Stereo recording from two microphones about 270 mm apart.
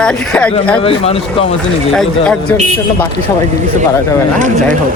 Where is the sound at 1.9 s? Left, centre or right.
Centre.